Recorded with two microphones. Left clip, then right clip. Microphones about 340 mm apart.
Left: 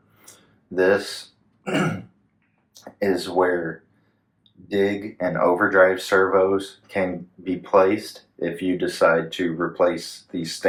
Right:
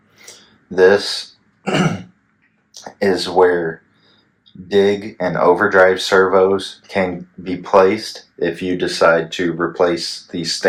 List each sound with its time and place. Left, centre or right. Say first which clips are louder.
0.7 s speech: right 8 dB; right
1.6 s throat clearing: right 5 dB; right
2.8 s speech: right 6 dB; right
4.7 s speech: right 8 dB; right